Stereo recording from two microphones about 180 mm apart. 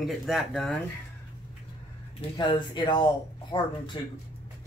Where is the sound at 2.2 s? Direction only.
35° left (ahead or behind).